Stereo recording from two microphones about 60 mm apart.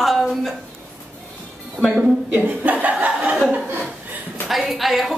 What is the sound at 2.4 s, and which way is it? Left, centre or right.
Speech, right.